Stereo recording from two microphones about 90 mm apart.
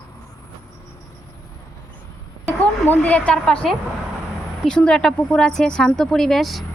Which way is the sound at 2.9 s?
15° left (ahead or behind).